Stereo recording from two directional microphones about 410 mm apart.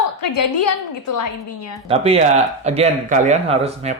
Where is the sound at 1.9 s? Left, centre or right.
Centre.